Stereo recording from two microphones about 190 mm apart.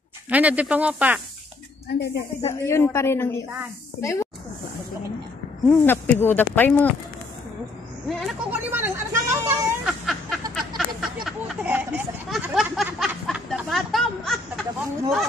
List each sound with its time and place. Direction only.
0.3 s speech: 5° right (ahead or behind)
2.0 s speech: 60° left (ahead or behind)
2.6 s speech: 15° left (ahead or behind)
5.7 s speech: 10° left (ahead or behind)
8.1 s a woman's voice: centre (ahead or behind)
8.7 s vehicle: 10° right (ahead or behind)
9.8 s a sound: centre (ahead or behind)